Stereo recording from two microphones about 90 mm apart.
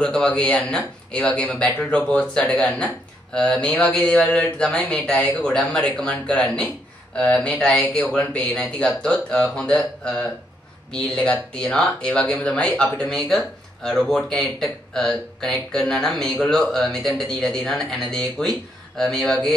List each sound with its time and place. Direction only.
0.0 s speech: 10° left (ahead or behind)
11.5 s speech: 10° left (ahead or behind)